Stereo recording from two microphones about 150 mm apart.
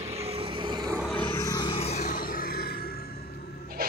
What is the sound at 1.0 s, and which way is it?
Vehicle, 10° left (ahead or behind).